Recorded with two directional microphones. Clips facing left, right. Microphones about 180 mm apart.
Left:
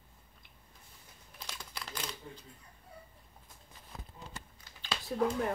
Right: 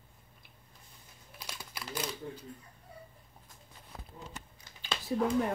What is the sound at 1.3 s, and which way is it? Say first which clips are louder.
Typing: right 1 dB; 5° right (ahead or behind).